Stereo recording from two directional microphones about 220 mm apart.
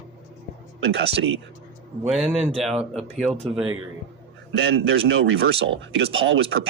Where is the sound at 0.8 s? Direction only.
50° right (ahead or behind).